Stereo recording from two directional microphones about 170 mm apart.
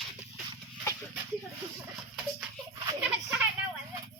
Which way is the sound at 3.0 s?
5° right (ahead or behind).